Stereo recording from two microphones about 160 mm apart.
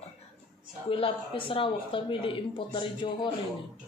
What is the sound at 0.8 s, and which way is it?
Speech, 35° left (ahead or behind).